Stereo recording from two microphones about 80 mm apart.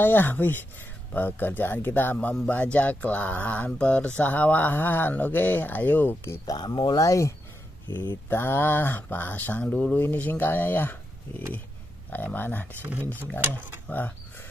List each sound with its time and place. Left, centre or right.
0.0 s speech: left
6.2 s speech: left
6.5 s speech: left
7.0 s speech: left
8.3 s speech: left
9.7 s speech: centre
9.9 s speech: left
13.4 s speech: right
13.8 s speech: left